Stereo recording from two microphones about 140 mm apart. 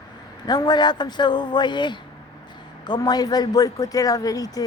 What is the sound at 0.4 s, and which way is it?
Speech, 30° left (ahead or behind).